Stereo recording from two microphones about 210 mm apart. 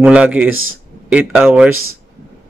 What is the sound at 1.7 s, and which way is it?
Speech, 85° right.